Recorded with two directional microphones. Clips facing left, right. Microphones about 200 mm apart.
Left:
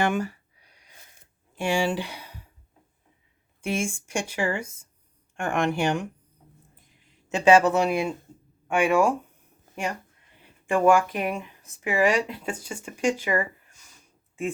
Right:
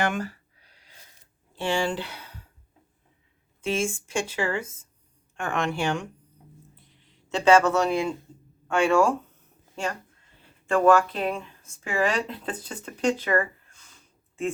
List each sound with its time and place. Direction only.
0.1 s a sound: 15° left (ahead or behind)
1.5 s speech: 10° left (ahead or behind)
3.6 s speech: 15° left (ahead or behind)
7.3 s speech: 15° left (ahead or behind)